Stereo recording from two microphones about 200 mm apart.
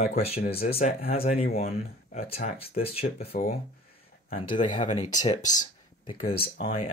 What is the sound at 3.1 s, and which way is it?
Speech, 50° left (ahead or behind).